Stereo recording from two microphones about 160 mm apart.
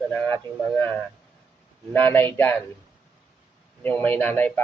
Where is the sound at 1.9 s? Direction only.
10° left (ahead or behind).